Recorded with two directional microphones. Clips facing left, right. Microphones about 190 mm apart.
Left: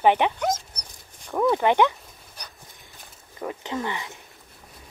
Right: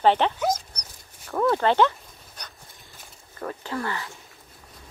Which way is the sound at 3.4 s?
15° left (ahead or behind).